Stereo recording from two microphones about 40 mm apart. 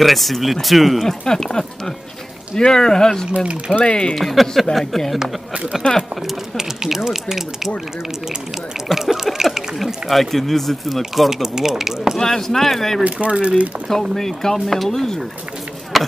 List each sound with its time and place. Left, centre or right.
0.0 s speech: centre
1.2 s speech: centre
3.3 s speech: right
3.8 s speech: left
4.1 s speech: centre
6.5 s speech: centre
8.8 s speech: centre
10.0 s speech: centre
12.2 s speech: centre
13.0 s speech: right
14.1 s speech: centre
15.9 s chop: centre